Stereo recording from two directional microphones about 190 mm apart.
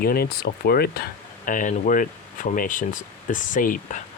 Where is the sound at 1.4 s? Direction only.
45° left (ahead or behind).